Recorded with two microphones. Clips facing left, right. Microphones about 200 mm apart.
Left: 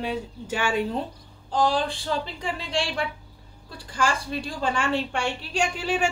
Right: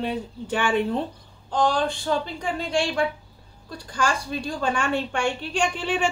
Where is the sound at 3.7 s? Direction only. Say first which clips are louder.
Right 1 dB; 30° left (ahead or behind).